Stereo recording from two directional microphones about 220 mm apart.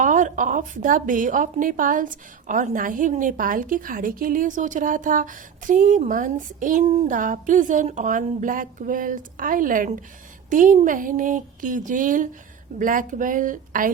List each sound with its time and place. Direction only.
0.0 s a woman's voice: 35° right (ahead or behind)